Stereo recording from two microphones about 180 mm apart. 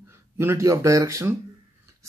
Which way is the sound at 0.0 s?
15° right (ahead or behind).